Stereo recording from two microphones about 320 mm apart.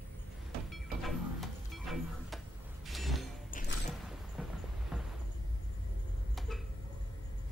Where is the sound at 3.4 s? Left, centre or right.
Left.